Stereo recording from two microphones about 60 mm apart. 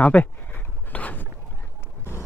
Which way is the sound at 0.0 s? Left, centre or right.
Left.